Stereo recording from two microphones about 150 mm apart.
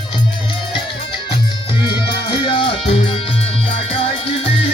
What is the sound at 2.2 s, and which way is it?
Music, 35° left (ahead or behind).